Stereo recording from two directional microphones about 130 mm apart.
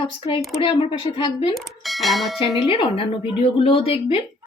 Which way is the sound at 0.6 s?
45° left (ahead or behind).